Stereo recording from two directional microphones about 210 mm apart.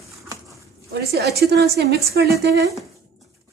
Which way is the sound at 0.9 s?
50° right (ahead or behind).